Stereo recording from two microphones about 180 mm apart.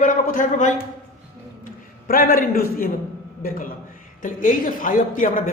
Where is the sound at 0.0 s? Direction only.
45° left (ahead or behind).